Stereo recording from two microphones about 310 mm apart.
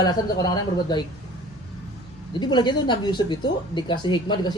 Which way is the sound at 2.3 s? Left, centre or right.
Centre.